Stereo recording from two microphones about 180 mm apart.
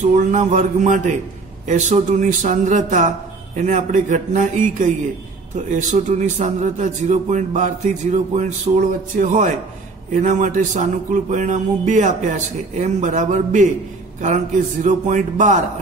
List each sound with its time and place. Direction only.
0.0 s a man's voice: 40° right (ahead or behind)